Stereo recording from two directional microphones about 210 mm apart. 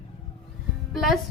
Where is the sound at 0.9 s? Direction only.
Centre (ahead or behind).